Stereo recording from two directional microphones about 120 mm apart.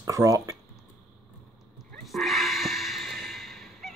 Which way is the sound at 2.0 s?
Centre (ahead or behind).